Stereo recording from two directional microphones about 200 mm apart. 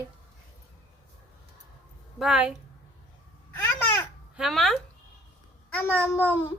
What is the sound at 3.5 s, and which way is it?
Babbling, 10° left (ahead or behind).